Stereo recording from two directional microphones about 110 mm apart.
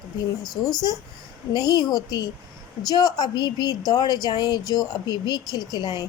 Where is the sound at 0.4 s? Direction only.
35° left (ahead or behind).